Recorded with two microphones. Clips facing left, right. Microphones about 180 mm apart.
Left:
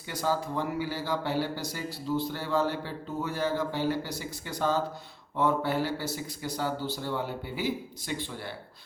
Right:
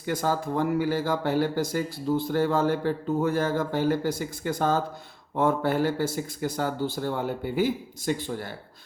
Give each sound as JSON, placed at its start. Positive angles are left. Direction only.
{"t": 0.0, "sound": "speech", "side_deg": -50}